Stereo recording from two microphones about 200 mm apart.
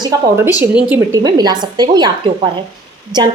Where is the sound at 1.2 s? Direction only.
20° right (ahead or behind).